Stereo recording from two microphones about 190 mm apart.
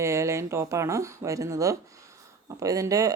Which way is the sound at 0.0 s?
15° right (ahead or behind).